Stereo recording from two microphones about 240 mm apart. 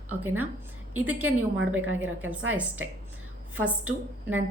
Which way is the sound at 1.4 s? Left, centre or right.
Right.